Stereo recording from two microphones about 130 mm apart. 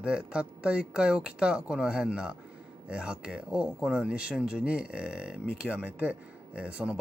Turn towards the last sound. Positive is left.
turn(degrees=-10)  # may be behind; listen again after turning